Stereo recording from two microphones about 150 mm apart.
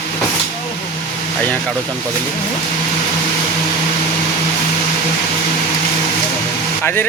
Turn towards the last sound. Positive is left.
turn(degrees=15)  # may be behind; listen again after turning